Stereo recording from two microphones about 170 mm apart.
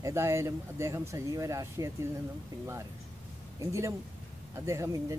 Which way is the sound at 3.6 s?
15° right (ahead or behind).